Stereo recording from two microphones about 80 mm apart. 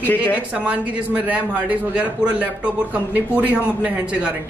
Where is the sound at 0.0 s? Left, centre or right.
Left.